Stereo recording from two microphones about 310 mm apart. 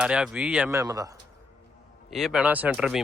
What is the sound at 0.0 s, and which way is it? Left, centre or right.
Speech, centre.